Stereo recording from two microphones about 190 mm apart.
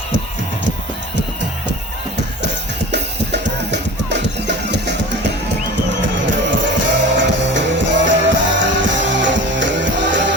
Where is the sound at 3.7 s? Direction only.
65° right (ahead or behind).